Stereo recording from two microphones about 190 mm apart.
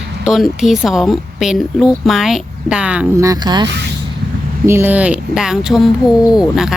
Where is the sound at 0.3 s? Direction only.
Centre (ahead or behind).